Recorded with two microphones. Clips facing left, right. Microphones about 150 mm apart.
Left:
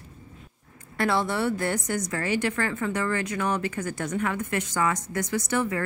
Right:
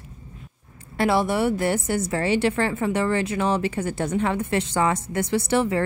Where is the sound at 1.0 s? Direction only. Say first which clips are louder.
Right 4 dB; 20° right (ahead or behind).